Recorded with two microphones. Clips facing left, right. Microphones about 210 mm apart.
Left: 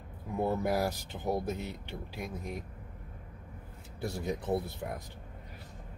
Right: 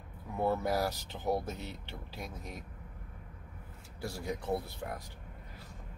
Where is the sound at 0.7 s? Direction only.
15° left (ahead or behind).